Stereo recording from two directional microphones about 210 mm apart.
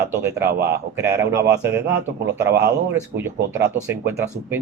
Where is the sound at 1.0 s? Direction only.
15° right (ahead or behind).